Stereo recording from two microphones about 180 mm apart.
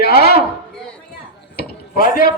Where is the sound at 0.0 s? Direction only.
60° left (ahead or behind).